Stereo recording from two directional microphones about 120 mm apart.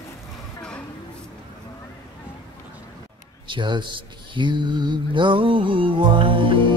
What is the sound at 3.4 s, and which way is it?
Speech, 40° right (ahead or behind).